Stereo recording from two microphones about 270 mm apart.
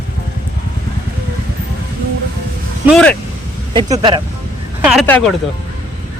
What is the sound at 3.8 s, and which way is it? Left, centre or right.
Speech, centre.